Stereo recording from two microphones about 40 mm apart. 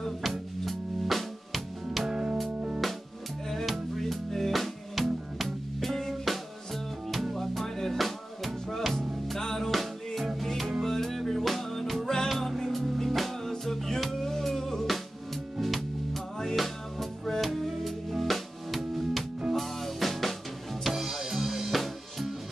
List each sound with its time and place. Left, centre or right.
0.0 s music: centre
2.0 s music: centre
3.6 s music: centre
20.8 s music: centre